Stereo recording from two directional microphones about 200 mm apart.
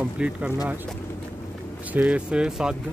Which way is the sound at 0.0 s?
5° right (ahead or behind).